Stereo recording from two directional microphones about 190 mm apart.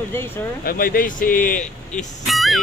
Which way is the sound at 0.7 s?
50° left (ahead or behind).